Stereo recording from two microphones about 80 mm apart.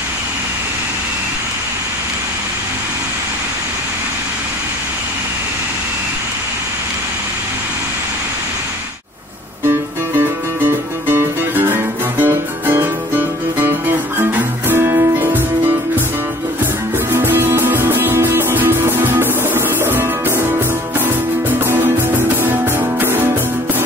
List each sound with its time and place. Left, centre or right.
9.7 s music: right
17.1 s music: right